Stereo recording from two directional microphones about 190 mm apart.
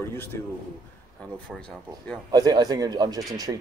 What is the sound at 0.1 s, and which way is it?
Speech, 15° left (ahead or behind).